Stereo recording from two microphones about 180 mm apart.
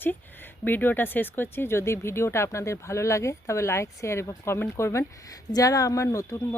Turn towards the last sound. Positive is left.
turn(degrees=15)  # may be behind; listen again after turning